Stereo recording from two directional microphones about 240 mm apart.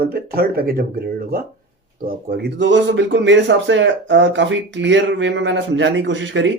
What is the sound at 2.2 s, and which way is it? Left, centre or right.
Speech, right.